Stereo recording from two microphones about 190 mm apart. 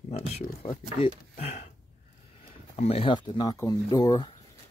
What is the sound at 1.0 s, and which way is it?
Speech, 35° left (ahead or behind).